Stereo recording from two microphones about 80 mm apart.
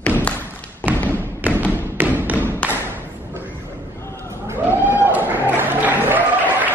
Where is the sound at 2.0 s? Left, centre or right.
Right.